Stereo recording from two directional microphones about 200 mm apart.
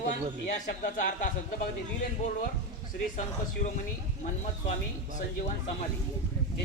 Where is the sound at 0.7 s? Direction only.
40° left (ahead or behind).